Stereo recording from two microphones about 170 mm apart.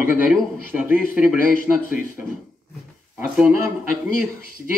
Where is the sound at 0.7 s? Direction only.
10° right (ahead or behind).